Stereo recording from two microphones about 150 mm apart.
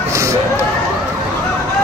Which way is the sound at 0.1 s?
20° right (ahead or behind).